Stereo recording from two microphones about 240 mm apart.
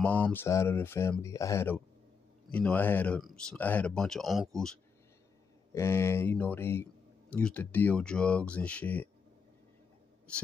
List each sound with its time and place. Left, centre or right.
0.0 s speech: centre
5.8 s speech: centre